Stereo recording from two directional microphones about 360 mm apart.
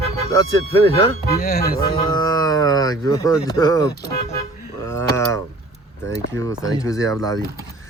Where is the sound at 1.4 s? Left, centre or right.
Left.